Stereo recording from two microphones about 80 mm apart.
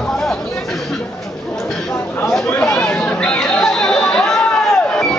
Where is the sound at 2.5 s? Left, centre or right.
Centre.